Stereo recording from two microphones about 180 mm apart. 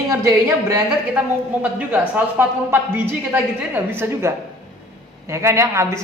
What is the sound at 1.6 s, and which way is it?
Speech, 10° right (ahead or behind).